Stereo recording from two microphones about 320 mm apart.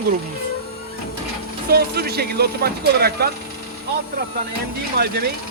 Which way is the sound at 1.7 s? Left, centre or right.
Right.